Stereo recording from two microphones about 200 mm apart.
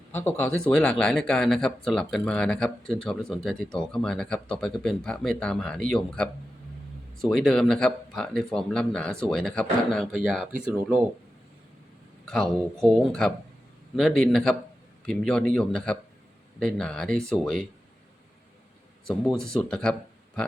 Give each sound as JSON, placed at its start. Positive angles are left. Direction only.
{"t": 0.1, "sound": "speech", "side_deg": 10}
{"t": 12.2, "sound": "speech", "side_deg": 0}
{"t": 19.0, "sound": "speech", "side_deg": 0}